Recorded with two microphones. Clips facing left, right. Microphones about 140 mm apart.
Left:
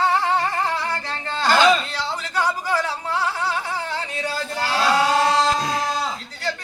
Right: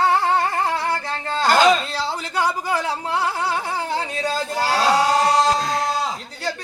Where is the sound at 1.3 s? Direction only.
45° right (ahead or behind).